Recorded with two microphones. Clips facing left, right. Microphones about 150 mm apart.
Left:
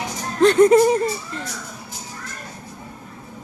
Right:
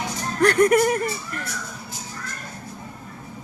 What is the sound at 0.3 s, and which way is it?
Speech, 25° left (ahead or behind).